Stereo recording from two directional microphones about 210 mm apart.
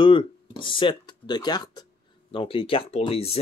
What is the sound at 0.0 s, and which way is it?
Speech, 25° left (ahead or behind).